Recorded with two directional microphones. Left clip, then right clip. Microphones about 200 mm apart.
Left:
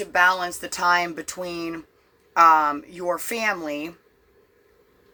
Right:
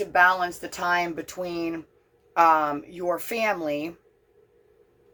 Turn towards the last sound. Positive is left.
turn(degrees=10)  # may be behind; listen again after turning